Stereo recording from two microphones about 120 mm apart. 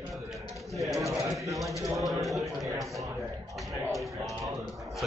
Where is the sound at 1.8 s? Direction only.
25° right (ahead or behind).